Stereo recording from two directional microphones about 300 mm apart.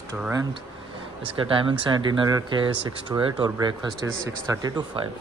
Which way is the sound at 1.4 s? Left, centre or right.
Centre.